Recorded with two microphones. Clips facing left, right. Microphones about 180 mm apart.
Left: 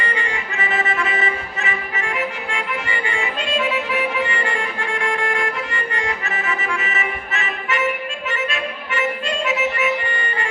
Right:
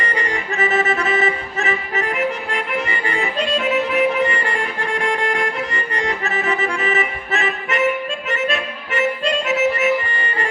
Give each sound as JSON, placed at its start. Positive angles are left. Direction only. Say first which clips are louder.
{"t": 0.0, "sound": "music", "louder": "right 2 dB", "side_deg": -35}